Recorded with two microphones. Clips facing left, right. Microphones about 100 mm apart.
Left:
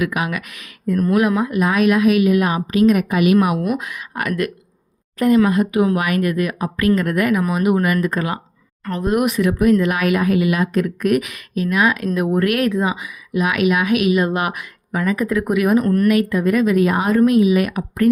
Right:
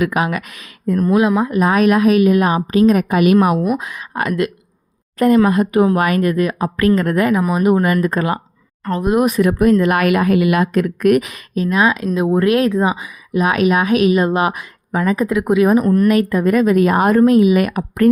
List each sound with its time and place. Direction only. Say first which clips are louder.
0.0 s speech: right 4 dB; 35° right (ahead or behind)
3.6 s speech: right 3 dB; 25° right (ahead or behind)
5.2 s speech: right 2 dB; 45° right (ahead or behind)
8.8 s speech: right 3 dB; 25° right (ahead or behind)
9.2 s a woman's voice: right 2 dB; 40° right (ahead or behind); by 11.2 s 60° right (ahead or behind)
11.2 s speech: right 2 dB; 30° right (ahead or behind)
16.0 s a woman's voice: right 2 dB; 40° right (ahead or behind)
17.2 s speech: right 2 dB; 35° right (ahead or behind)
17.4 s a woman's voice: right 2 dB; 50° right (ahead or behind)